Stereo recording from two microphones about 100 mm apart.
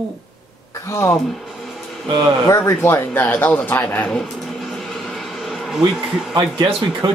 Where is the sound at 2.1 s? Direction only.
40° right (ahead or behind).